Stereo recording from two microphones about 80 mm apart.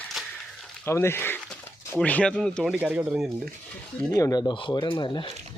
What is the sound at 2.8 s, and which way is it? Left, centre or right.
Speech, centre.